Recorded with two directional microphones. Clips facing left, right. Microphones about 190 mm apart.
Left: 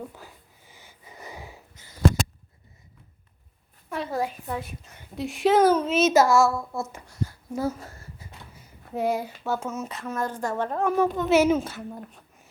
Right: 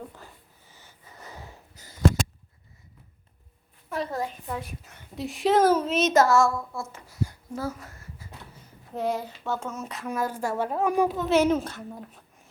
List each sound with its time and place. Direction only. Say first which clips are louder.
0.1 s sniff: left 1 dB; 5° left (ahead or behind)
3.8 s a sound: right 1 dB; centre (ahead or behind)
4.1 s a woman's voice: left 3 dB; 10° left (ahead or behind)
6.7 s speech: left 4 dB; 20° left (ahead or behind)
7.5 s a sound: left 4 dB; 20° left (ahead or behind)
9.0 s a woman's voice: left 2 dB; 10° left (ahead or behind)